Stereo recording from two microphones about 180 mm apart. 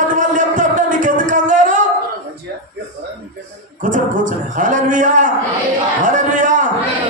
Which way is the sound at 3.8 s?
45° right (ahead or behind).